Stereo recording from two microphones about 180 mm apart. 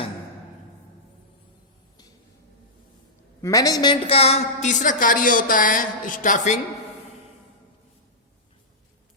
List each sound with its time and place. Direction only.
3.4 s a woman's voice: 20° left (ahead or behind); by 6.6 s 45° left (ahead or behind)